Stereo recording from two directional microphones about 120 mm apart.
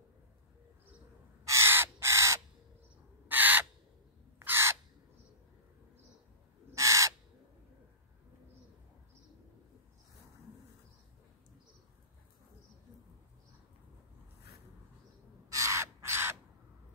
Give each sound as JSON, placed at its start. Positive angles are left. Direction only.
{"t": 1.4, "sound": "crow", "side_deg": -25}
{"t": 4.4, "sound": "bird", "side_deg": -20}
{"t": 6.7, "sound": "crow", "side_deg": -25}
{"t": 15.5, "sound": "crow", "side_deg": -25}